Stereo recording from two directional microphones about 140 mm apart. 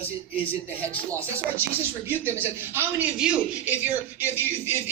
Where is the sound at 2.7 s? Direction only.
10° right (ahead or behind).